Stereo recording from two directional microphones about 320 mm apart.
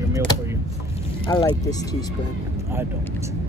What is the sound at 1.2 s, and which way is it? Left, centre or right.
Speech, centre.